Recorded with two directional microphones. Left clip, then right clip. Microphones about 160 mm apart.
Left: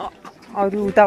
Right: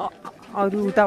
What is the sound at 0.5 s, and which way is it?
Speech, 25° right (ahead or behind).